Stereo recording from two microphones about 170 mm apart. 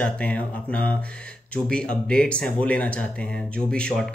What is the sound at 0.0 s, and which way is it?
Speech, 5° left (ahead or behind).